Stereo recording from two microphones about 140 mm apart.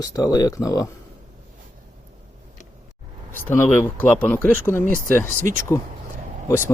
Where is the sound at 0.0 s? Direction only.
25° left (ahead or behind).